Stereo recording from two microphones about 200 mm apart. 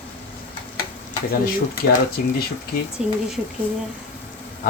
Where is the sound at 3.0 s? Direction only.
5° right (ahead or behind).